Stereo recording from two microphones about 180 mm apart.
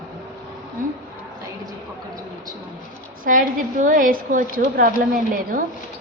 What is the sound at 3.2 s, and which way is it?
A woman's voice, 50° right (ahead or behind).